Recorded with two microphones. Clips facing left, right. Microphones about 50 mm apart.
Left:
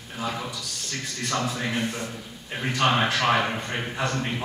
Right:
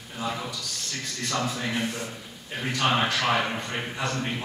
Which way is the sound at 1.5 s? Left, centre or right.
Centre.